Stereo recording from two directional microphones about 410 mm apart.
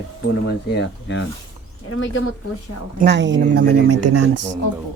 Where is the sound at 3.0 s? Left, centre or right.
Right.